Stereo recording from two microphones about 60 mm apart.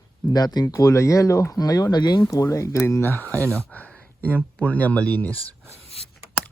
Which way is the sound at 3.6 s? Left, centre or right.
Left.